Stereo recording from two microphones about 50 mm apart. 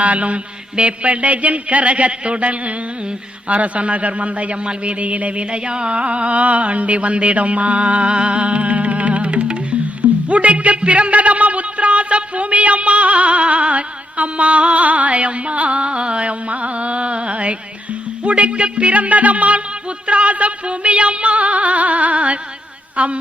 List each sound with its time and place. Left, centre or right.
0.0 s a man's voice: right
10.0 s a sound: right
18.2 s a man's voice: right